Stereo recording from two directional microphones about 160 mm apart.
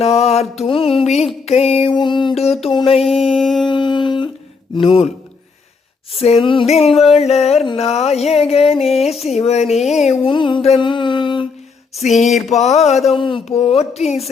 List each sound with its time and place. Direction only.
0.0 s music: 40° left (ahead or behind)
3.0 s a sound: centre (ahead or behind)
3.7 s humming: 30° left (ahead or behind)
4.8 s music: 35° left (ahead or behind)
6.1 s music: 40° left (ahead or behind)
9.6 s a sound: centre (ahead or behind)
10.0 s speech: 45° left (ahead or behind)
10.3 s music: 30° left (ahead or behind)
12.5 s speech: 45° left (ahead or behind)
13.1 s music: 35° left (ahead or behind)